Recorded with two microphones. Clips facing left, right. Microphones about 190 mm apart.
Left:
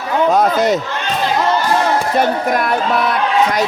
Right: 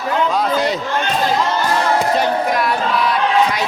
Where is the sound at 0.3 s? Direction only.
45° left (ahead or behind).